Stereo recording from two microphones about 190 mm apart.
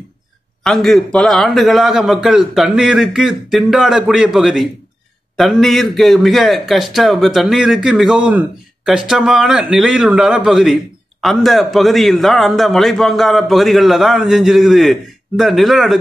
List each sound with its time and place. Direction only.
0.7 s a man's voice: centre (ahead or behind)